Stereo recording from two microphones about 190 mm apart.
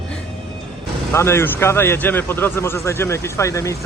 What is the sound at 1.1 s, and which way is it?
A man's voice, 15° left (ahead or behind).